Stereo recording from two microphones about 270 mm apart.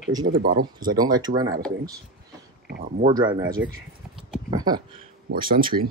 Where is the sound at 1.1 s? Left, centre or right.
Centre.